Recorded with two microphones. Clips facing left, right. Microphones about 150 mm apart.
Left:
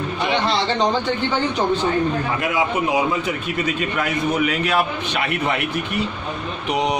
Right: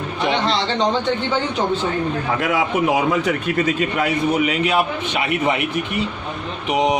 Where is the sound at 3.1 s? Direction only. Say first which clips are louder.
Right 4 dB; 70° right (ahead or behind).